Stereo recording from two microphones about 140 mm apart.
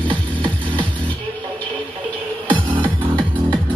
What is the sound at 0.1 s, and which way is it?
Music, 35° right (ahead or behind).